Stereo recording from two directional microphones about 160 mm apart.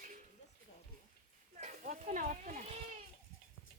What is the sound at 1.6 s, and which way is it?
Speech, 55° right (ahead or behind).